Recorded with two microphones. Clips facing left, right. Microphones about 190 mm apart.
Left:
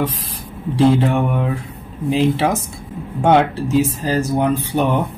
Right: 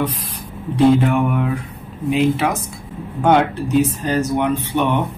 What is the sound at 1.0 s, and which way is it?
Speech, 30° left (ahead or behind).